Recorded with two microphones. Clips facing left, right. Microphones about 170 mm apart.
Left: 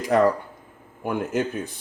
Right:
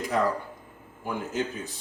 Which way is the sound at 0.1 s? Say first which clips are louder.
Left 8 dB; 65° left (ahead or behind).